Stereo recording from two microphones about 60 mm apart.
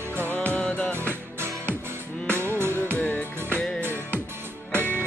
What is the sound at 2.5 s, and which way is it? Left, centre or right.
Music, right.